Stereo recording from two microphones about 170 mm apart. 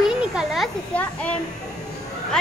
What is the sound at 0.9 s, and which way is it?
Speech, 10° left (ahead or behind).